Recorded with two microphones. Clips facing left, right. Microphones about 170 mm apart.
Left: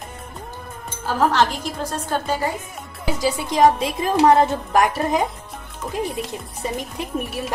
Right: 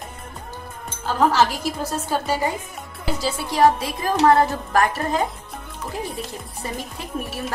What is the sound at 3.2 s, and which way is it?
A woman's voice, 15° left (ahead or behind).